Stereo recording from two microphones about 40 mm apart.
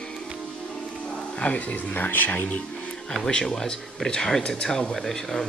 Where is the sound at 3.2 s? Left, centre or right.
Centre.